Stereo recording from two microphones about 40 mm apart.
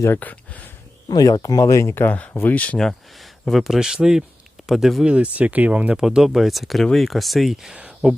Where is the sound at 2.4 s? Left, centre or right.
Left.